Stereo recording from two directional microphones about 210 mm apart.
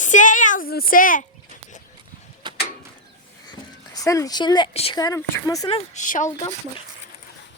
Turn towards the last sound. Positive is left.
turn(degrees=40)  # may be behind; listen again after turning